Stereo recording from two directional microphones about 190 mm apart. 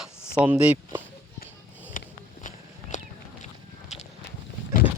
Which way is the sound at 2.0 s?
45° left (ahead or behind).